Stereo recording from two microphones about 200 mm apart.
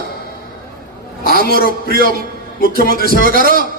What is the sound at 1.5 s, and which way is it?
Speech, 50° left (ahead or behind).